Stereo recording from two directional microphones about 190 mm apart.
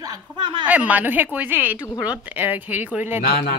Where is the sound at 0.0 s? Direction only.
25° right (ahead or behind).